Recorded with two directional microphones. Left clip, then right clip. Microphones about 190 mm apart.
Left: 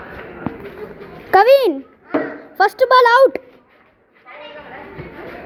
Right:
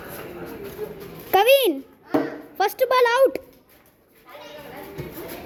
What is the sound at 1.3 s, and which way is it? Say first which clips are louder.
Speech: left 6 dB; 20° right (ahead or behind).